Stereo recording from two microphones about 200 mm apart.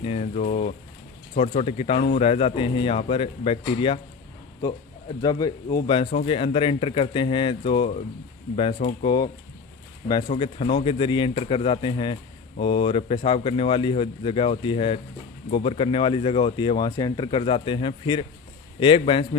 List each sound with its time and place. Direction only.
0.0 s speech: 35° left (ahead or behind)
10.4 s speech: 25° left (ahead or behind)